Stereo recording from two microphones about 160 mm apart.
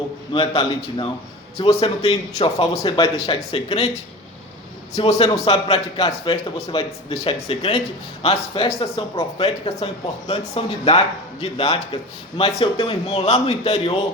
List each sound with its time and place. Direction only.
0.3 s speech: 30° left (ahead or behind)
4.9 s speech: 40° left (ahead or behind)